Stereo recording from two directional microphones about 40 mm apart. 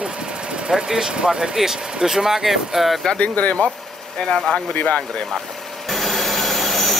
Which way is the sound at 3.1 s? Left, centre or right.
Left.